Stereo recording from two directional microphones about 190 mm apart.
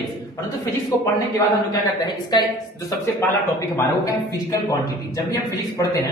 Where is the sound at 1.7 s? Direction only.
20° left (ahead or behind).